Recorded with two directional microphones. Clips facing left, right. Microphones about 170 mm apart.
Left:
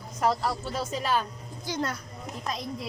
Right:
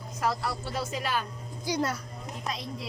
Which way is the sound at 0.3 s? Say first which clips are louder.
Left 4 dB; 30° left (ahead or behind).